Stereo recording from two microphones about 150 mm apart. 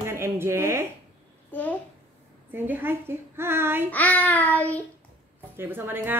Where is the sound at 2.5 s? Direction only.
15° right (ahead or behind).